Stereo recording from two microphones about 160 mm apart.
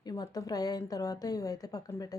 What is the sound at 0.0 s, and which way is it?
A woman's voice, 25° left (ahead or behind).